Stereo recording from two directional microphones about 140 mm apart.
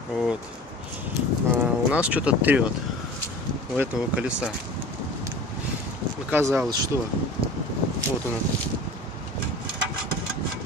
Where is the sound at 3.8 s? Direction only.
10° right (ahead or behind).